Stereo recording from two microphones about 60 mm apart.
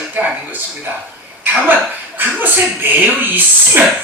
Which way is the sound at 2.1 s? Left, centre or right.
Right.